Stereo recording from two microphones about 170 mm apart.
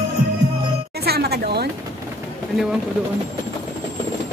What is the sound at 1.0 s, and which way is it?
Music, 70° right (ahead or behind).